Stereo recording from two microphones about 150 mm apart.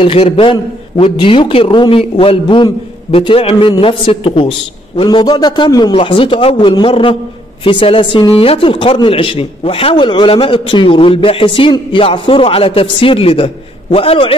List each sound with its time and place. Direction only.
0.0 s a man's voice: 40° left (ahead or behind)